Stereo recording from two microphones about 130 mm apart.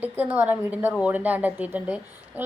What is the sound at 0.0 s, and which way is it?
A woman's voice, 15° right (ahead or behind).